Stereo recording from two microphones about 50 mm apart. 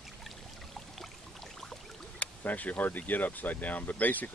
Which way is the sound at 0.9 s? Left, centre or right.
Centre.